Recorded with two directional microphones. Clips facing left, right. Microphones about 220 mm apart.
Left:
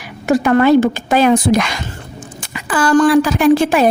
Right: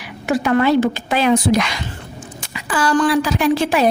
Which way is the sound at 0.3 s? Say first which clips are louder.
Left 5 dB; 45° left (ahead or behind).